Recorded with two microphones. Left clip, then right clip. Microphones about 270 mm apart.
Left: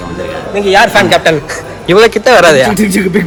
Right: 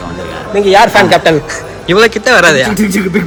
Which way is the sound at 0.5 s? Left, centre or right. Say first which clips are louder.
Right 1 dB; right.